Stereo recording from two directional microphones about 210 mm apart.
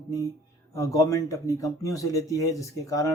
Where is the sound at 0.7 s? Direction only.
15° left (ahead or behind).